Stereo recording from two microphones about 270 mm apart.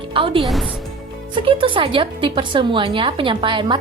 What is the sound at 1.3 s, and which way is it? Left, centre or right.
A woman's voice, centre.